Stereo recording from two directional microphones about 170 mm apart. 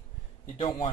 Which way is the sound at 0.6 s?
30° left (ahead or behind).